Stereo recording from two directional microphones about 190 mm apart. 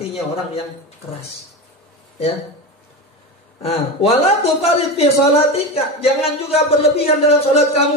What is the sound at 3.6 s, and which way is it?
Speech, 30° left (ahead or behind).